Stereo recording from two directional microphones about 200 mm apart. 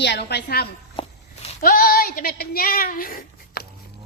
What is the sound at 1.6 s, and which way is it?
Speech, 45° left (ahead or behind).